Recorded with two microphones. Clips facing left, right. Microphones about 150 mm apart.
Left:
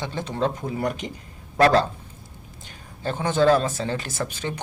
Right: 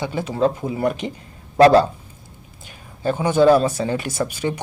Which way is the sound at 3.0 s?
10° right (ahead or behind).